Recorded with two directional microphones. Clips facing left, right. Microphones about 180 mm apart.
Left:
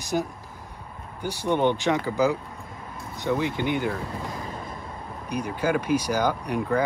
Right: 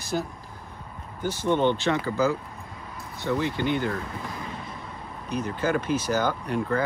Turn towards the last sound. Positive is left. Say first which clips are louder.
# left 1 dB
turn(degrees=15)  # may be behind; listen again after turning